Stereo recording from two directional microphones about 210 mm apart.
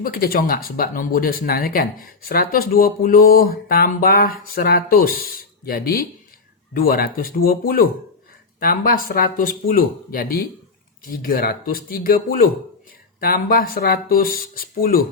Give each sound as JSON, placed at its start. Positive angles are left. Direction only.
{"t": 0.0, "sound": "speech", "side_deg": 45}